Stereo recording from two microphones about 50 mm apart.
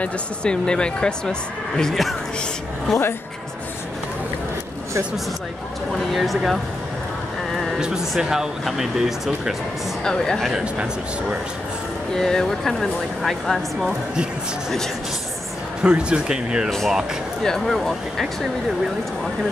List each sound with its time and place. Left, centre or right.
0.0 s speech: centre
1.8 s speech: centre
6.1 s speech: centre
8.2 s speech: centre
10.0 s speech: centre
10.5 s speech: right
12.2 s speech: centre
15.8 s speech: centre
17.4 s speech: centre